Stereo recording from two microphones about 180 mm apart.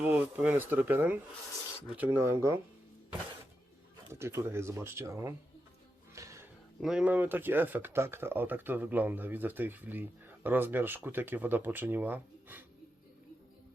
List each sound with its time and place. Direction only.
0.0 s speech: 10° right (ahead or behind)
4.1 s speech: 15° right (ahead or behind)
6.1 s music: 15° right (ahead or behind)
6.7 s speech: 5° right (ahead or behind)